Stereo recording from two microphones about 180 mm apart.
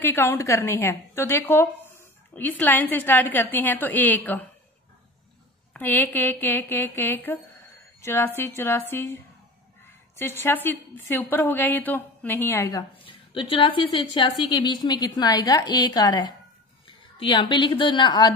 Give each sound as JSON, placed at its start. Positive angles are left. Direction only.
{"t": 0.0, "sound": "a woman's voice", "side_deg": 15}
{"t": 5.7, "sound": "a woman's voice", "side_deg": 10}
{"t": 13.0, "sound": "a woman's voice", "side_deg": 30}